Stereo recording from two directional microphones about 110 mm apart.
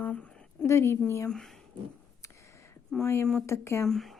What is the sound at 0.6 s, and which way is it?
Speech, 25° left (ahead or behind).